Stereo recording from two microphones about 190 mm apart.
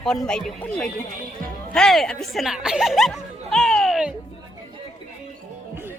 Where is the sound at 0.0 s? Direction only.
5° left (ahead or behind).